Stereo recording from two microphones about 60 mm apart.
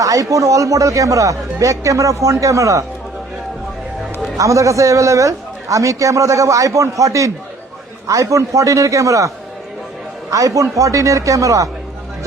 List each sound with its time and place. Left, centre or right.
0.0 s a man's voice: right
4.4 s a man's voice: right
10.3 s a man's voice: right